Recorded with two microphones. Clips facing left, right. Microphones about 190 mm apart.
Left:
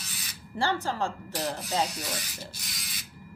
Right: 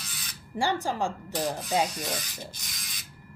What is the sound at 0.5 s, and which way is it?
Speech, 15° right (ahead or behind).